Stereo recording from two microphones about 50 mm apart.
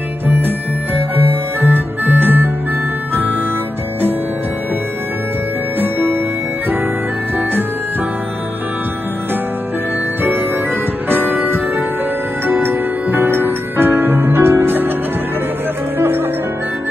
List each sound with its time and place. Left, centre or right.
0.3 s music: right
5.8 s music: right
11.1 s music: right
16.0 s music: right